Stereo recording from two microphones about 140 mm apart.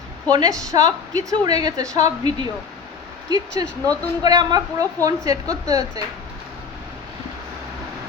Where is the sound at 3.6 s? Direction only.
30° right (ahead or behind).